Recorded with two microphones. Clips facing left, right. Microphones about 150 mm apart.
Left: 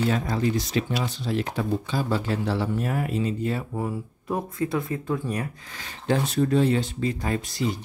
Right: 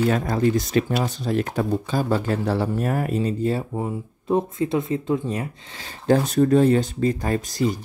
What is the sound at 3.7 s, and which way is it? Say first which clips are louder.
Speech: right 2 dB; 20° right (ahead or behind).